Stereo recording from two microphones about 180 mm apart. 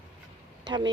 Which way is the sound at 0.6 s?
25° right (ahead or behind).